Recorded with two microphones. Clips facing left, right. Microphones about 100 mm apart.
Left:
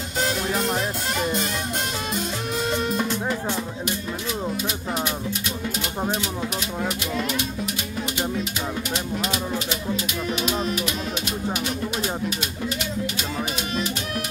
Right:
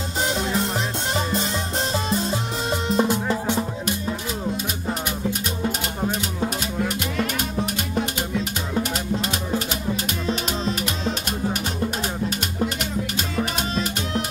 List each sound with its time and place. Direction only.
1.1 s music: 30° right (ahead or behind)
2.9 s music: 20° right (ahead or behind)
7.6 s music: 45° right (ahead or behind)
10.2 s music: 35° right (ahead or behind)
12.0 s music: 40° right (ahead or behind)